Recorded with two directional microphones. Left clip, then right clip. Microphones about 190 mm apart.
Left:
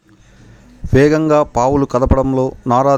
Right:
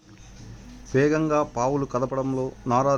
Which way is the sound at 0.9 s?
45° left (ahead or behind).